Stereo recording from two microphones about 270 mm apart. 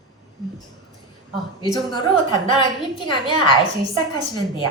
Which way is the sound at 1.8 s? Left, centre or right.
Centre.